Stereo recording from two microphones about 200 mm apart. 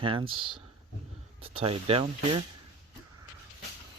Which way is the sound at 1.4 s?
30° right (ahead or behind).